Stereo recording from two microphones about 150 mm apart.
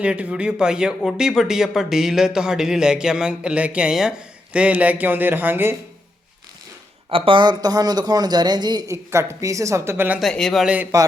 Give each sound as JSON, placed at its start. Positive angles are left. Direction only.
{"t": 0.0, "sound": "speech", "side_deg": -10}
{"t": 7.1, "sound": "speech", "side_deg": -35}
{"t": 10.2, "sound": "speech", "side_deg": 0}